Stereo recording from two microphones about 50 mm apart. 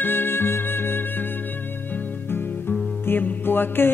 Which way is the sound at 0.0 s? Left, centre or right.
Left.